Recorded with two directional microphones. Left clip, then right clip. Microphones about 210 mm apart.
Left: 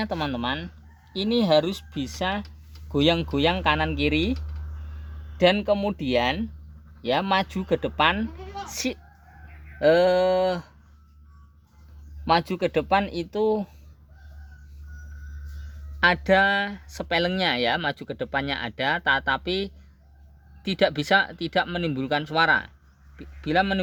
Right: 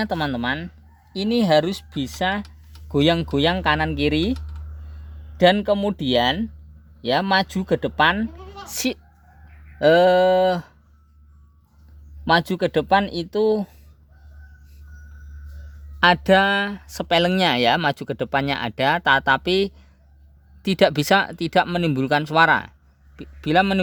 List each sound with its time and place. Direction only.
0.0 s speech: 40° right (ahead or behind)
12.2 s speech: 40° right (ahead or behind)
16.0 s speech: 45° right (ahead or behind)